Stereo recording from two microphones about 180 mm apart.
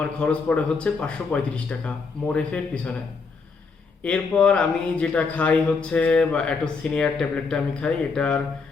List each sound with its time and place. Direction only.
0.0 s speech: 5° left (ahead or behind)
4.0 s speech: 5° left (ahead or behind)